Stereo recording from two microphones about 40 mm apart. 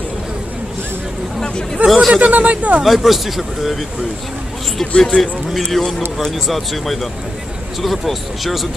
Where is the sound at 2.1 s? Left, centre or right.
Right.